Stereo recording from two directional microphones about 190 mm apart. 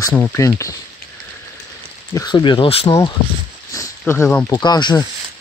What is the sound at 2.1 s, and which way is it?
Speech, 20° left (ahead or behind).